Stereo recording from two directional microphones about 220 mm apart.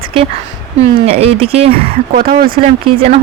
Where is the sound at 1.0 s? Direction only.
25° right (ahead or behind).